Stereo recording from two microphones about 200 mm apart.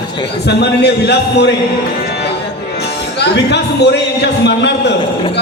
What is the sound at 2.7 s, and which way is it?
Speech, 55° left (ahead or behind).